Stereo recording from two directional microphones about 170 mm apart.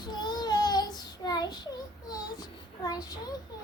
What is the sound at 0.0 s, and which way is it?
Child singing, 25° left (ahead or behind).